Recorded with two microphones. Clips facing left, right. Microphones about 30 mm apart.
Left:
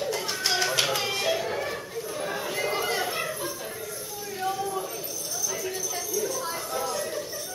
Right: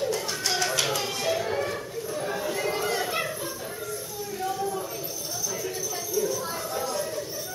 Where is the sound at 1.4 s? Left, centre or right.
Centre.